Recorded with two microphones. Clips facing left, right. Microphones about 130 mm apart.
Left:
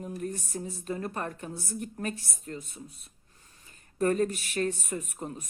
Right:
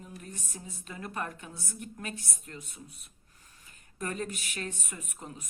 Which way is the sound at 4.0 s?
40° left (ahead or behind).